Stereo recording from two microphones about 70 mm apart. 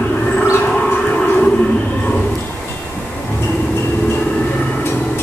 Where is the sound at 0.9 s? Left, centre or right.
Left.